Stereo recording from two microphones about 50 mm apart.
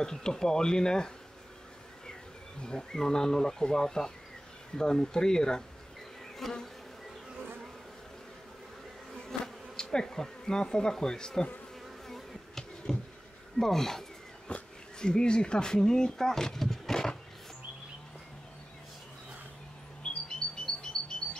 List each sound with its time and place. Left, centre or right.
0.0 s speech: centre
2.6 s speech: centre
6.3 s bee: centre
9.3 s bee: centre
9.8 s speech: centre
12.1 s insect: centre
13.6 s speech: centre
20.0 s music: centre